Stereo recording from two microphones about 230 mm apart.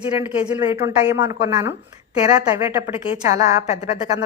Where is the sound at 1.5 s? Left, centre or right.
Centre.